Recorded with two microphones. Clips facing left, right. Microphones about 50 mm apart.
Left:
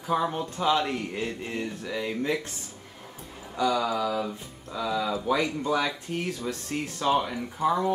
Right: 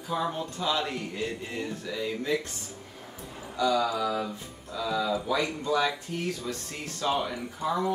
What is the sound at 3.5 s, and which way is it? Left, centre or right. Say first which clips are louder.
Speech: even; centre.